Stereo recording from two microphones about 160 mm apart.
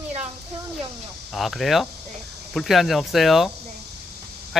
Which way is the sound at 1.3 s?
Centre (ahead or behind).